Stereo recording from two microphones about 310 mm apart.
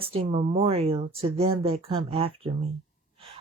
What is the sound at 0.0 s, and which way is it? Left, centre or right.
Speech, centre.